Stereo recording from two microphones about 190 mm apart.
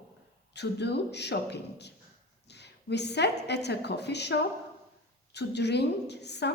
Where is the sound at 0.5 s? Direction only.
60° left (ahead or behind).